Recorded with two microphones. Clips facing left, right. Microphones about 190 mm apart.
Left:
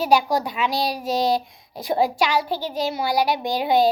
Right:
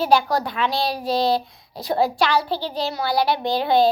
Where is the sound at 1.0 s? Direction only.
45° left (ahead or behind).